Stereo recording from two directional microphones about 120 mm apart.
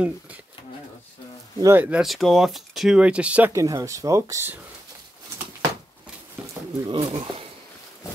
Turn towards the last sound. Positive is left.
turn(degrees=-45)  # may be behind; listen again after turning